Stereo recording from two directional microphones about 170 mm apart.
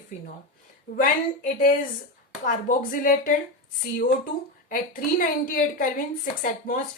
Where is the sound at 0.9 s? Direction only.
55° left (ahead or behind).